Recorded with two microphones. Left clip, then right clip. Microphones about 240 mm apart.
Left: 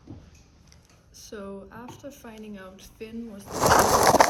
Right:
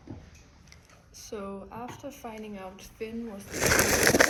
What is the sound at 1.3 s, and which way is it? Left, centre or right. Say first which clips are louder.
Speech: right 1 dB; left.